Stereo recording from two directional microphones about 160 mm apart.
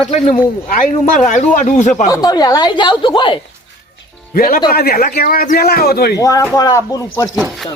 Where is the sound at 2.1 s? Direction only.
25° left (ahead or behind).